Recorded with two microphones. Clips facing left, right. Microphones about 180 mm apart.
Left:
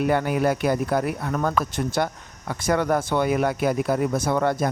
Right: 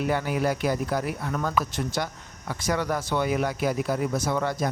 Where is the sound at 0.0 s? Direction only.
55° left (ahead or behind).